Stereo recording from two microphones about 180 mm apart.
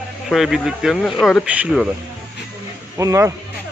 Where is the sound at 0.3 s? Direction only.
Centre (ahead or behind).